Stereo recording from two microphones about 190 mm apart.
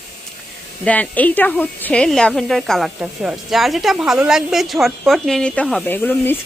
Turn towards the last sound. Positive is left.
turn(degrees=10)  # may be behind; listen again after turning